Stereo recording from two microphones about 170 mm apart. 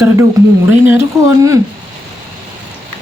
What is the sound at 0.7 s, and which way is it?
Speech, 15° right (ahead or behind).